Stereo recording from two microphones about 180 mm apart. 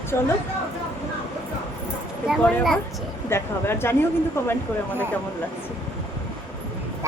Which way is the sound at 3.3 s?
15° left (ahead or behind).